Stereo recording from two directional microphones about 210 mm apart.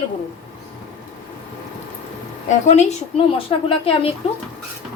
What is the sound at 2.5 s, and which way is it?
A woman's voice, 35° left (ahead or behind).